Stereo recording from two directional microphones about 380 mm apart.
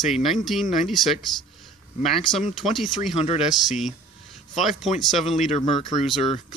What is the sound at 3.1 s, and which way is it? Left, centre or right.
Speech, centre.